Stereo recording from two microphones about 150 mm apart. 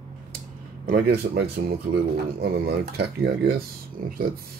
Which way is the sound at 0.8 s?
85° right.